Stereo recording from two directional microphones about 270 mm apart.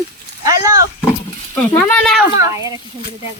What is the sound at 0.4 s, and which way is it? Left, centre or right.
Wild animals, centre.